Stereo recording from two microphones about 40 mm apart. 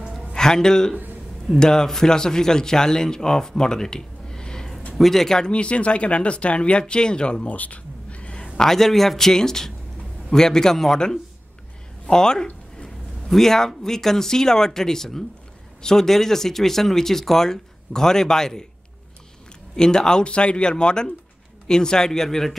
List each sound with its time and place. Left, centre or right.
0.3 s a man's voice: centre
5.4 s speech: left
7.4 s a sound: left
8.5 s speech: centre
19.7 s speech: centre